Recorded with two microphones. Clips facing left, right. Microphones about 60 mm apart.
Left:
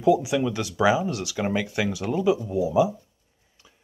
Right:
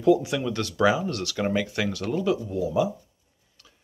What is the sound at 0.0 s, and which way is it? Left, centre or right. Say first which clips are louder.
Speech: left 1 dB; centre.